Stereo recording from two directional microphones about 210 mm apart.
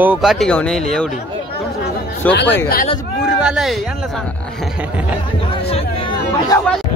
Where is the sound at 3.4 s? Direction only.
Centre (ahead or behind).